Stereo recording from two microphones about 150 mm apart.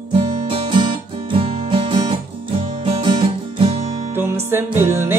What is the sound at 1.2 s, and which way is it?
Music, 35° right (ahead or behind).